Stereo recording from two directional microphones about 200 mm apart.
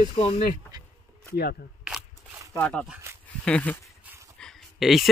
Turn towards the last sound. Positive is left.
turn(degrees=0)  # may be behind; listen again after turning